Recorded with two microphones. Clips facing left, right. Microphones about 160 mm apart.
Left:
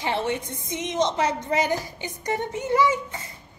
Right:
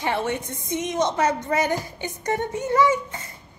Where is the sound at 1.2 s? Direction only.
20° left (ahead or behind).